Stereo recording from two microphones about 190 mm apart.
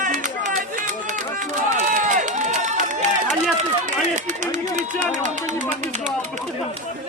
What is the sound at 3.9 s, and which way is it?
Speech, 40° right (ahead or behind).